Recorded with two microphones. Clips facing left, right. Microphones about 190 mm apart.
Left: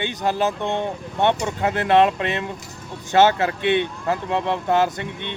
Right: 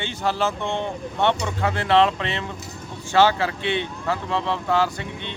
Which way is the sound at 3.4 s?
55° left (ahead or behind).